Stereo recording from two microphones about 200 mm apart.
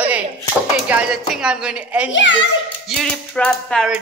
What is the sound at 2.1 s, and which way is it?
Speech, 70° left (ahead or behind).